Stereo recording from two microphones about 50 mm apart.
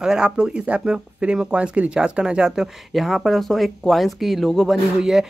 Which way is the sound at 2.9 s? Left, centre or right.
Centre.